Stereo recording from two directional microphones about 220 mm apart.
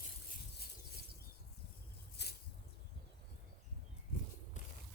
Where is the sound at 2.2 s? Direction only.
50° left (ahead or behind).